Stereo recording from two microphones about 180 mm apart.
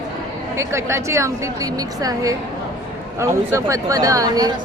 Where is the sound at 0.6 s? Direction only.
15° right (ahead or behind).